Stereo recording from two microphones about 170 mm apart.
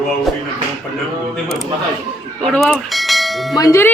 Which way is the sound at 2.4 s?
Centre (ahead or behind).